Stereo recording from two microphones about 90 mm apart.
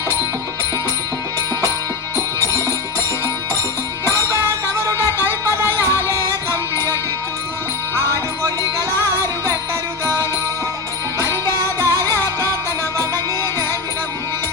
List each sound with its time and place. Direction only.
2.1 s music: 40° right (ahead or behind)
5.0 s music: 30° left (ahead or behind)
11.2 s music: 35° right (ahead or behind)